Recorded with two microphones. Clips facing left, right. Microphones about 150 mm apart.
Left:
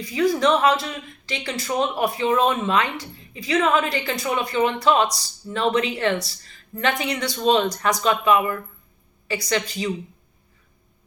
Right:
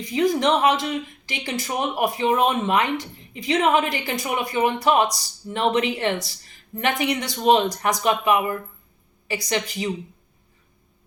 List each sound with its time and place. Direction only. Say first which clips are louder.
0.0 s speech: even; 20° right (ahead or behind)